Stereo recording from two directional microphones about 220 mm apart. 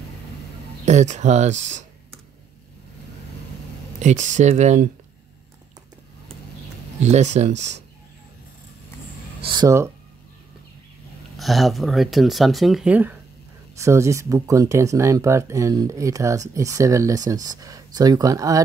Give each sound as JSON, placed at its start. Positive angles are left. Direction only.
{"t": 0.8, "sound": "speech", "side_deg": -30}
{"t": 4.0, "sound": "speech", "side_deg": -35}
{"t": 7.0, "sound": "speech", "side_deg": -30}
{"t": 9.4, "sound": "a sound", "side_deg": -20}
{"t": 11.3, "sound": "speech", "side_deg": 0}